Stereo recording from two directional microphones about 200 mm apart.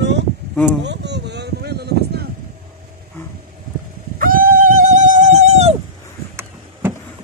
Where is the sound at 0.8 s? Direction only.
60° right (ahead or behind).